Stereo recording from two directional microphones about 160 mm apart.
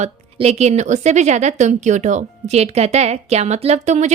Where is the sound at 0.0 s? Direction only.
40° right (ahead or behind).